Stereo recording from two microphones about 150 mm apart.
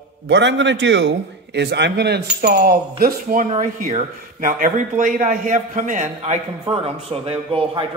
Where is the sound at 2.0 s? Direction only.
90° right.